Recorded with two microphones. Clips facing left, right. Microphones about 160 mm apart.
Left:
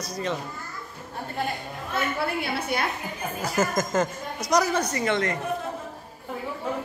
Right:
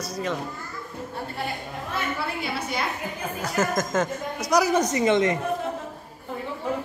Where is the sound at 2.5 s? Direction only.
55° left (ahead or behind).